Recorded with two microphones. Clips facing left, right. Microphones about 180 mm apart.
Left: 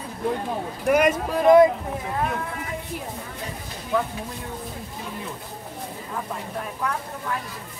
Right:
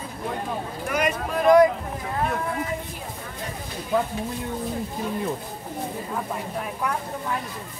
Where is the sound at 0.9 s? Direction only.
50° left (ahead or behind).